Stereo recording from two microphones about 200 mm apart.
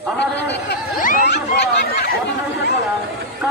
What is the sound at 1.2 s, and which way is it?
Speech, 55° left (ahead or behind).